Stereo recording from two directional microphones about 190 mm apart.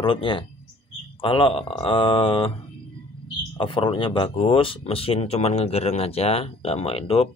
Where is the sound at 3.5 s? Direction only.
25° left (ahead or behind).